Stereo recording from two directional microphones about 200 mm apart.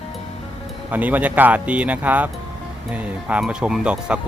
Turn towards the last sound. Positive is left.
turn(degrees=-5)  # may be behind; listen again after turning